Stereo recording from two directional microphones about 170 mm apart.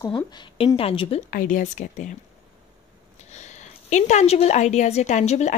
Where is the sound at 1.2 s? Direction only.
55° left (ahead or behind).